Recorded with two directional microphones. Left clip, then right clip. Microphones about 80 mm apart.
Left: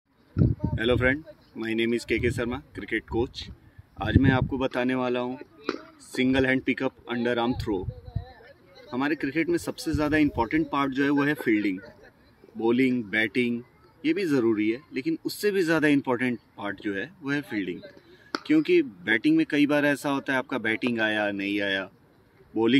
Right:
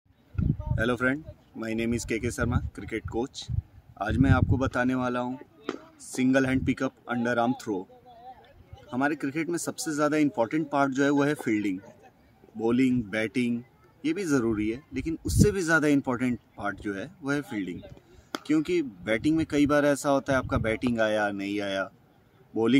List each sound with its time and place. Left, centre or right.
0.7 s speech: right
5.3 s speech: centre
6.2 s speech: right
7.2 s speech: right
8.9 s speech: right
18.4 s speech: right